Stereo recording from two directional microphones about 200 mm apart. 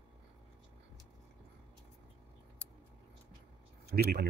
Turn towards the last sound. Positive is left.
turn(degrees=-50)  # may be behind; listen again after turning